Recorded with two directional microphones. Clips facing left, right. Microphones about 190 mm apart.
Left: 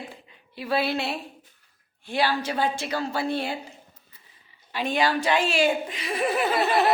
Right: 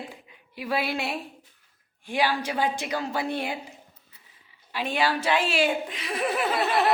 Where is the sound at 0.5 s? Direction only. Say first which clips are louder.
Left 2 dB; 10° right (ahead or behind).